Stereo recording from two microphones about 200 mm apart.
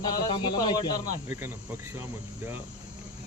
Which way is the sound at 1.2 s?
10° right (ahead or behind).